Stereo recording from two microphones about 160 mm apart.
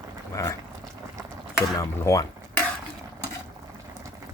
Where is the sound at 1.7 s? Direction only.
20° left (ahead or behind).